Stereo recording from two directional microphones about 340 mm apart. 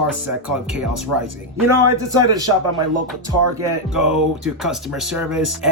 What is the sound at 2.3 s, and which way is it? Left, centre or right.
Speech, centre.